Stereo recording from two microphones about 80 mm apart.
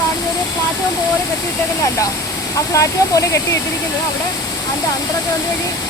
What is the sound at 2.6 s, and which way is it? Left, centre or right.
Speech, left.